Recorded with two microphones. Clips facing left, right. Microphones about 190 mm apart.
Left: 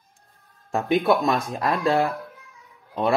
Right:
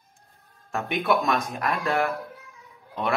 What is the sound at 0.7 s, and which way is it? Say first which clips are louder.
Speech: left 4 dB; 30° left (ahead or behind).